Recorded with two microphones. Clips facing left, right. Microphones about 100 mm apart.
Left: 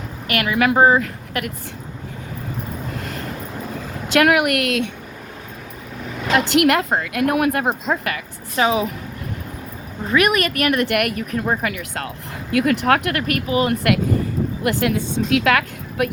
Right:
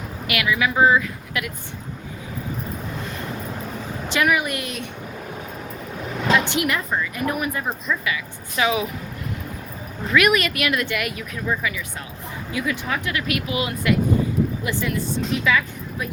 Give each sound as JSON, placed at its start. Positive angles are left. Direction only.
{"t": 0.3, "sound": "speech", "side_deg": 45}
{"t": 4.2, "sound": "speech", "side_deg": 70}
{"t": 6.3, "sound": "speech", "side_deg": 65}
{"t": 8.5, "sound": "speech", "side_deg": 35}
{"t": 10.1, "sound": "speech", "side_deg": 35}
{"t": 11.6, "sound": "speech", "side_deg": 65}
{"t": 14.6, "sound": "speech", "side_deg": 70}